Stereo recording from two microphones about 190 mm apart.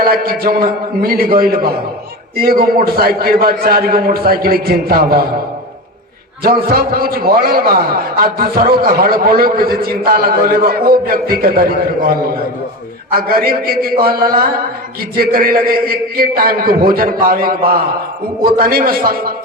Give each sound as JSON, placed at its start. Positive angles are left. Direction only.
{"t": 0.0, "sound": "a man's voice", "side_deg": -50}
{"t": 6.4, "sound": "a man's voice", "side_deg": -50}